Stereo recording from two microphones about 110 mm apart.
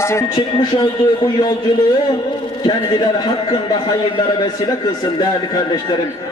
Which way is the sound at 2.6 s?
45° left (ahead or behind).